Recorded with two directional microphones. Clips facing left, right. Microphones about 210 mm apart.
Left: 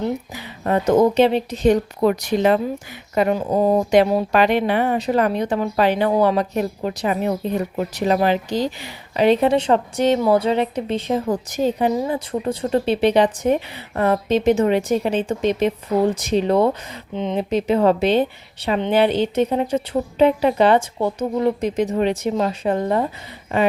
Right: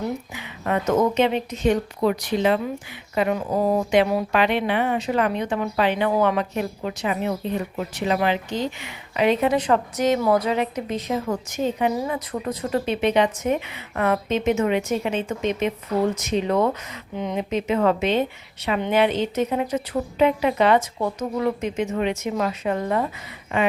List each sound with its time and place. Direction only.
0.3 s speech: 35° left (ahead or behind)